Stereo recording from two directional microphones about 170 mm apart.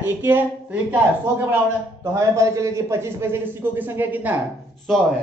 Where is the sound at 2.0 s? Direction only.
20° right (ahead or behind).